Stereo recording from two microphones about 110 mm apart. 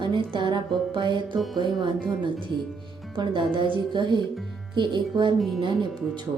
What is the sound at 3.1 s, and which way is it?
Speech, 45° right (ahead or behind).